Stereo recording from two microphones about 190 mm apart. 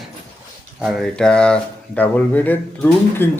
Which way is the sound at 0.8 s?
Centre (ahead or behind).